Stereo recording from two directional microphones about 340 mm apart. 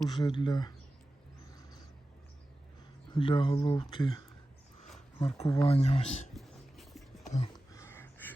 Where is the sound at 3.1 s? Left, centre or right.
Centre.